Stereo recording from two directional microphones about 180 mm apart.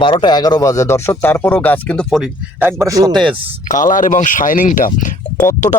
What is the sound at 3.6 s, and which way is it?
A man's voice, 45° left (ahead or behind).